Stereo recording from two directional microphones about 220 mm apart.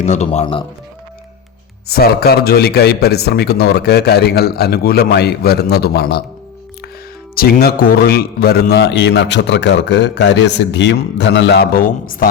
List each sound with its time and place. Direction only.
0.0 s speech: 30° left (ahead or behind)
1.9 s a man's voice: 45° left (ahead or behind)
7.3 s a man's voice: 45° left (ahead or behind)